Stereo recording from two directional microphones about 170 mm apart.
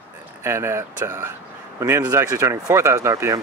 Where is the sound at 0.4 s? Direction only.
15° right (ahead or behind).